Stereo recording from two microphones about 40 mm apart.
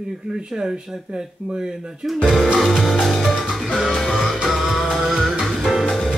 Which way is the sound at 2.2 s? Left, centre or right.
Centre.